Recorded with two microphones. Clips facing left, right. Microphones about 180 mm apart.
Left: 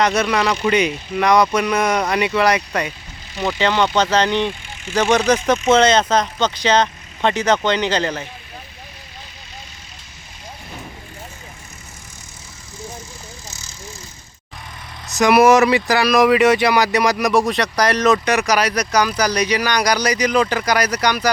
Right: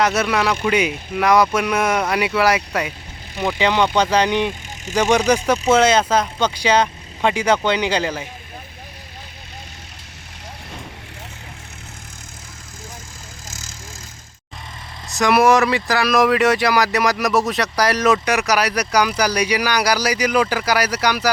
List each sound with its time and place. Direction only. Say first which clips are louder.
0.0 s speech: left 1 dB; 5° right (ahead or behind)
13.5 s vehicle: right 2 dB; 90° right
15.1 s speech: left 3 dB; centre (ahead or behind)